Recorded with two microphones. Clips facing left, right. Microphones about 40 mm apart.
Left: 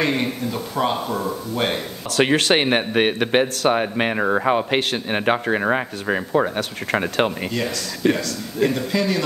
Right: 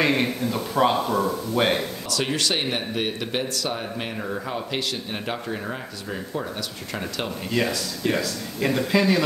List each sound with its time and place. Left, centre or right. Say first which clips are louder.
0.0 s speech: even; centre
2.0 s speech: left 9 dB; left
8.0 s speech: left 5 dB; left
8.6 s speech: right 1 dB; centre